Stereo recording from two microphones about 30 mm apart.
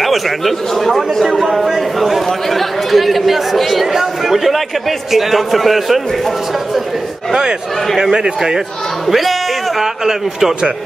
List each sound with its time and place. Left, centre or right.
0.0 s a man's voice: centre
3.8 s a man's voice: centre
8.0 s a man's voice: centre
9.0 s music: centre